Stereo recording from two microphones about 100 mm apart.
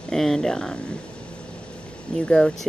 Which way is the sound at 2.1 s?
10° left (ahead or behind).